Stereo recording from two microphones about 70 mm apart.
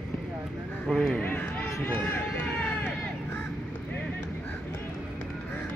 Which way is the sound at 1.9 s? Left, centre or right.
Left.